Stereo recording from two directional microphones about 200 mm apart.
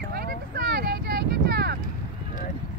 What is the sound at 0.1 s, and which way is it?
Vehicle, 50° right (ahead or behind).